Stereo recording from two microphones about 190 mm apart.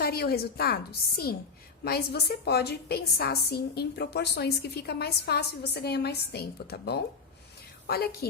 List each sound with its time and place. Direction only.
0.0 s a woman's voice: 55° left (ahead or behind)